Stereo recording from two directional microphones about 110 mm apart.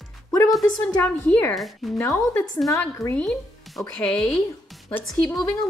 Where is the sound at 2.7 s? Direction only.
25° left (ahead or behind).